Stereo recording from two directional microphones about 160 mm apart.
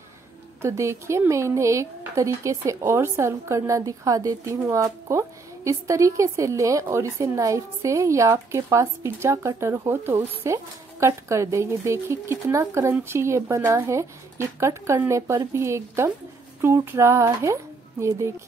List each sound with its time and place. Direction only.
0.6 s speech: 15° right (ahead or behind)